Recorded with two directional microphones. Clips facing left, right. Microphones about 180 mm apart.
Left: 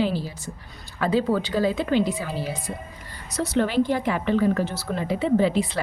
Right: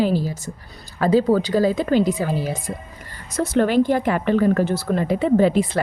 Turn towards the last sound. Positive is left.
turn(degrees=-50)  # may be behind; listen again after turning